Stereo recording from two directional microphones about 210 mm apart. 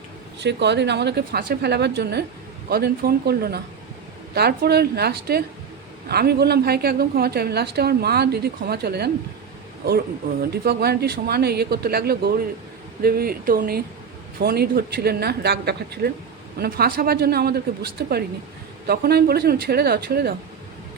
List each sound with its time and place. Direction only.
0.3 s a woman's voice: 55° right (ahead or behind)
10.5 s a woman's voice: 50° right (ahead or behind)